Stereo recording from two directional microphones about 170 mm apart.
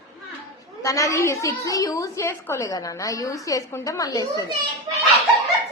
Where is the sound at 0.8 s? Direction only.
20° left (ahead or behind).